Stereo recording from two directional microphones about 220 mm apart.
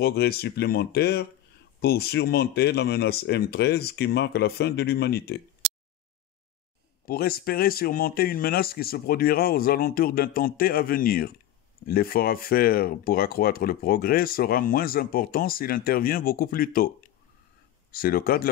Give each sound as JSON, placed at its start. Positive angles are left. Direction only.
{"t": 0.0, "sound": "speech", "side_deg": 45}
{"t": 7.1, "sound": "speech", "side_deg": 45}
{"t": 17.9, "sound": "speech", "side_deg": 40}